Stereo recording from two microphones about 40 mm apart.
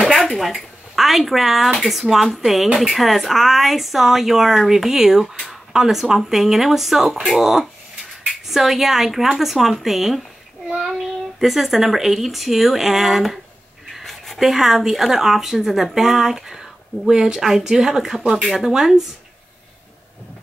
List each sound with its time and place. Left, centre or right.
0.1 s speech: centre
14.0 s a sound: centre
14.4 s speech: centre
17.4 s speech: centre